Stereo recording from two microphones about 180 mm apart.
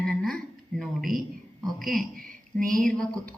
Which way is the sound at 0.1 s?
Centre (ahead or behind).